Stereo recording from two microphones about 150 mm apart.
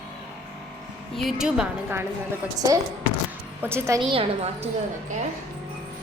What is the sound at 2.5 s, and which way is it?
A woman's voice, 25° right (ahead or behind).